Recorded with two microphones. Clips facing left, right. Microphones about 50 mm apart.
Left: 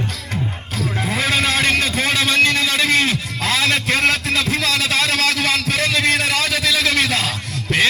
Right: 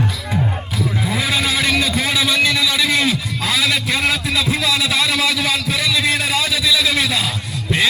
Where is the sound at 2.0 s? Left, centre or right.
Left.